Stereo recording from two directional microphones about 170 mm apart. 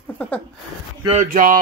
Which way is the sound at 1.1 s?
50° right (ahead or behind).